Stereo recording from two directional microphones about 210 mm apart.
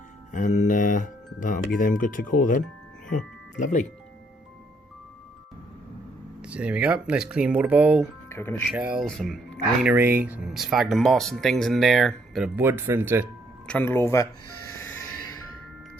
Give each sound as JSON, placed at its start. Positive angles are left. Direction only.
{"t": 0.3, "sound": "speech", "side_deg": 35}
{"t": 6.4, "sound": "speech", "side_deg": -5}
{"t": 8.3, "sound": "speech", "side_deg": 10}
{"t": 8.7, "sound": "speech", "side_deg": -5}
{"t": 13.7, "sound": "speech", "side_deg": 10}
{"t": 14.4, "sound": "music", "side_deg": 90}